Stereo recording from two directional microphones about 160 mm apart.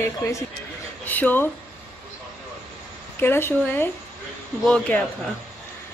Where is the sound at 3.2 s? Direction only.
15° left (ahead or behind).